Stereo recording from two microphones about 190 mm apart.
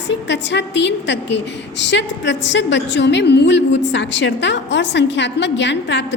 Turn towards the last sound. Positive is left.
turn(degrees=70)  # may be behind; listen again after turning